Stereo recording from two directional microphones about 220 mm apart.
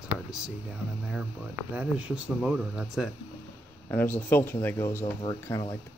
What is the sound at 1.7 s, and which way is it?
Speech, 5° right (ahead or behind).